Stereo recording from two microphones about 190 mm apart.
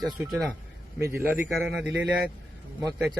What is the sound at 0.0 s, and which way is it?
Speech, centre (ahead or behind).